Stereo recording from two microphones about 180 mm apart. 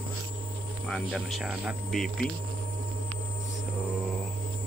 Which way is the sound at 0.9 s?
Centre (ahead or behind).